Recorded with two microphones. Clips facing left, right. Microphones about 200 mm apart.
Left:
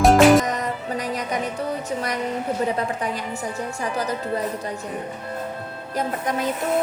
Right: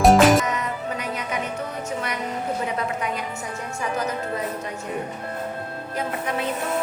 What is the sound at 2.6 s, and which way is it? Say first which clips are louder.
Music: left 2 dB; 35° left (ahead or behind).